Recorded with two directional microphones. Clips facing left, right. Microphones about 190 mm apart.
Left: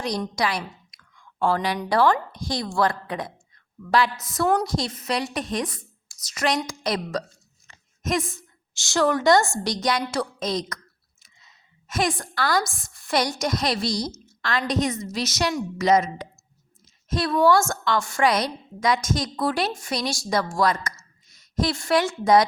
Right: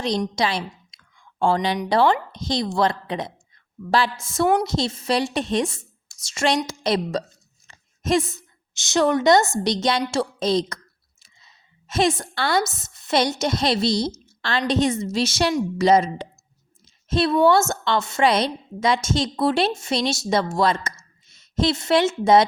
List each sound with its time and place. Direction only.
0.0 s a woman's voice: 25° right (ahead or behind)
7.7 s a sound: 30° right (ahead or behind)
8.4 s a woman's voice: 20° right (ahead or behind)